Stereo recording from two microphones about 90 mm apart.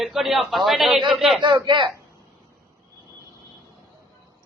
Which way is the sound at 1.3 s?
60° right (ahead or behind).